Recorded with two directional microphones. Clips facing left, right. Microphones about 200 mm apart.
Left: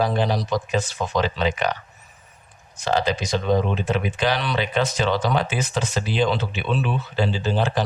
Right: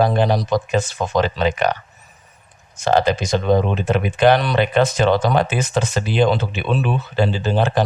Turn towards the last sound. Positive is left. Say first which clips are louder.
# right 4 dB
turn(degrees=-55)  # may be behind; listen again after turning